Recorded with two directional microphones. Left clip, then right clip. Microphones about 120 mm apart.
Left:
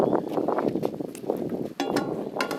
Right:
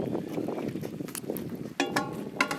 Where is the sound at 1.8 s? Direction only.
5° right (ahead or behind).